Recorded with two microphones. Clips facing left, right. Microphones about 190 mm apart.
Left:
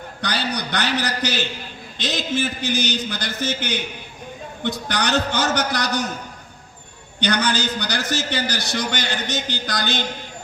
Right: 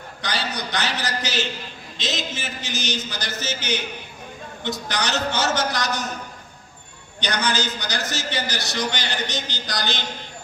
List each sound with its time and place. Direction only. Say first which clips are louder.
0.2 s a man's voice: left 3 dB; 60° left (ahead or behind)
7.2 s a man's voice: left 3 dB; 55° left (ahead or behind)